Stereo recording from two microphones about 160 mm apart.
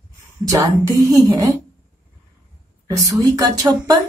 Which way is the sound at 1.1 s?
25° right (ahead or behind).